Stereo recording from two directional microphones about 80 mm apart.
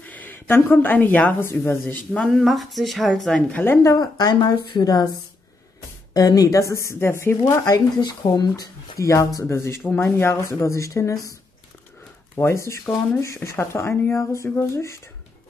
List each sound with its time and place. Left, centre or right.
0.0 s a sound: left
0.6 s speech: left
2.1 s speech: centre
2.4 s speech: centre
3.5 s speech: left
3.9 s a woman's voice: left
6.1 s speech: left
7.6 s speech: left
12.4 s speech: left